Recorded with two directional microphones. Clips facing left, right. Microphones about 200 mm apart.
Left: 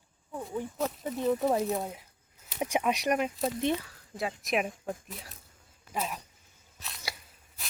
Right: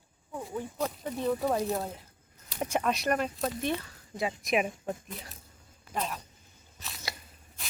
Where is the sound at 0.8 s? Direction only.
Centre (ahead or behind).